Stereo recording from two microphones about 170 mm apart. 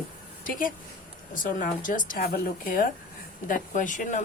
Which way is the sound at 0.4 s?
55° left (ahead or behind).